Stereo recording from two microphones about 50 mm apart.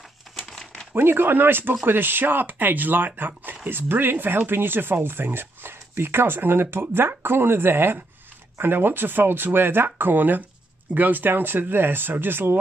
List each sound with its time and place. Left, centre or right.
0.4 s crumpling: centre
0.9 s speech: right